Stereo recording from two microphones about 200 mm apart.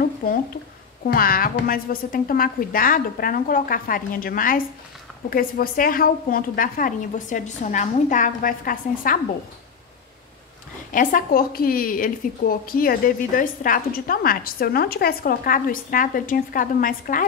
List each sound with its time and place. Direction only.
0.0 s a sound: 45° left (ahead or behind)
1.0 s a woman's voice: 45° left (ahead or behind)
10.9 s a woman's voice: 45° left (ahead or behind)